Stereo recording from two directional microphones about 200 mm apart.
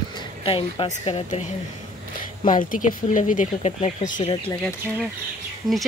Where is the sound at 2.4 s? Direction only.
40° left (ahead or behind).